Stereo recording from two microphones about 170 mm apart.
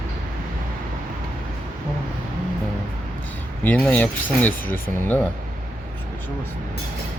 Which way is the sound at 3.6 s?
10° left (ahead or behind).